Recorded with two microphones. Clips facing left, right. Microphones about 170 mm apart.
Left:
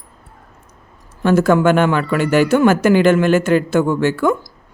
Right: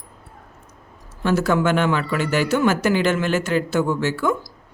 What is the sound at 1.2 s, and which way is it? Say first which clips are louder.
Speech: left 6 dB; 50° left (ahead or behind).